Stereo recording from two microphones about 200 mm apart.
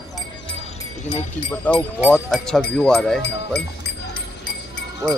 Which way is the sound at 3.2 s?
55° left (ahead or behind).